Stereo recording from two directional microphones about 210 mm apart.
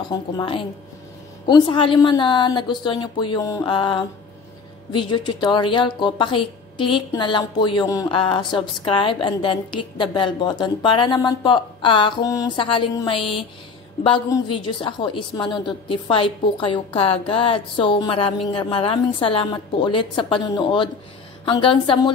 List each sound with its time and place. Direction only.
0.1 s speech: 20° left (ahead or behind)